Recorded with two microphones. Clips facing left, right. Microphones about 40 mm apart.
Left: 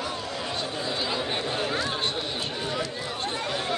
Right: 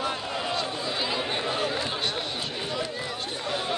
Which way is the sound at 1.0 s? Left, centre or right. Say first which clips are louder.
Right 1 dB; centre.